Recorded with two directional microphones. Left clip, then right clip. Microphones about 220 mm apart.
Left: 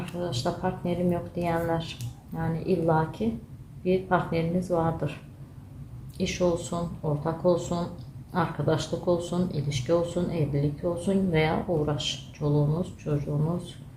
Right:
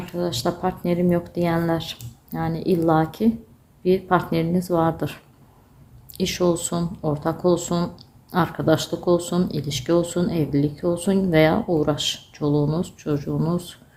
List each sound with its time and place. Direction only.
0.2 s speech: 50° right (ahead or behind)
6.1 s speech: 50° right (ahead or behind)